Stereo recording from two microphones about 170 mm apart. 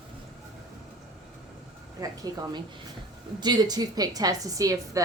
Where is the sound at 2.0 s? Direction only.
20° right (ahead or behind).